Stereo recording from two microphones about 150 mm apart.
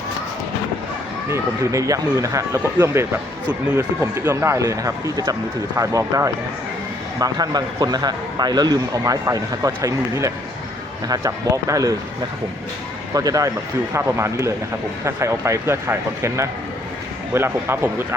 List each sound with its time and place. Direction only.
1.3 s speech: 20° right (ahead or behind)
13.1 s speech: 25° right (ahead or behind)